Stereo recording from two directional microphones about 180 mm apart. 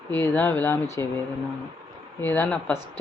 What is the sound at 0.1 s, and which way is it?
Speech, 10° left (ahead or behind).